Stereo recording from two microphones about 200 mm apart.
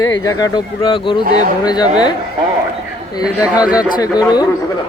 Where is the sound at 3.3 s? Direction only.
5° right (ahead or behind).